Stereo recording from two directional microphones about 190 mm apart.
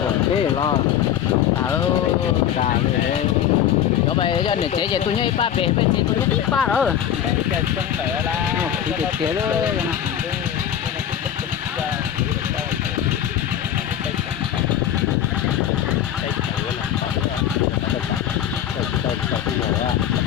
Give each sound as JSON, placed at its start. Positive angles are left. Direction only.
{"t": 4.2, "sound": "speech", "side_deg": 25}
{"t": 6.5, "sound": "speech", "side_deg": 5}